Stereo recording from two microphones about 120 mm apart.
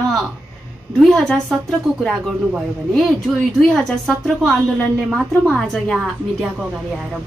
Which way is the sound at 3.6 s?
5° left (ahead or behind).